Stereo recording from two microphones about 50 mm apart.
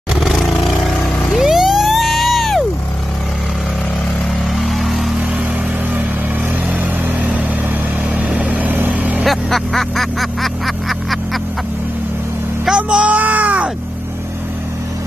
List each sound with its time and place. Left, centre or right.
0.1 s vehicle: centre
4.6 s vehicle: centre
6.8 s vehicle: right
9.2 s vehicle: centre
12.7 s a sound: right